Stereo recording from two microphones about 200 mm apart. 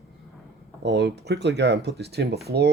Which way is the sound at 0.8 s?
60° right (ahead or behind).